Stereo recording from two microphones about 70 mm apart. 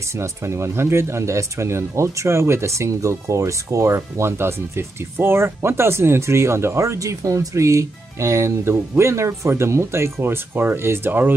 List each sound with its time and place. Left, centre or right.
0.1 s speech: right